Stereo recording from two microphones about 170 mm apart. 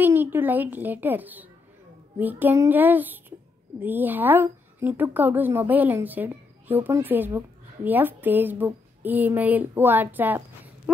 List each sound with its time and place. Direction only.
0.0 s a woman's voice: 10° right (ahead or behind)